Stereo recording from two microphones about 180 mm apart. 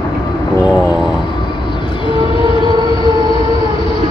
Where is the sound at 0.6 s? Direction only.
Centre (ahead or behind).